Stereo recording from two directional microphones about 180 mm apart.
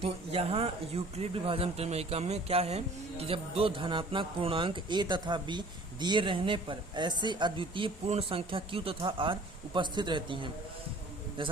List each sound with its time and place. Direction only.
0.0 s speech: 35° right (ahead or behind)